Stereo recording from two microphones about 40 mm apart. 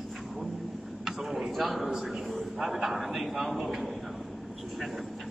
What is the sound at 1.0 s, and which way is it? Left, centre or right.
Speech, centre.